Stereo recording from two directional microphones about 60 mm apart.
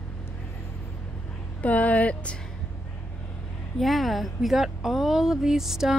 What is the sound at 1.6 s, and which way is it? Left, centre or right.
Speech, left.